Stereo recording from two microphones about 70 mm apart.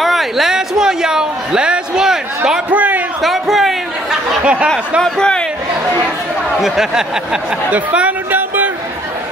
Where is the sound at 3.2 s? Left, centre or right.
Centre.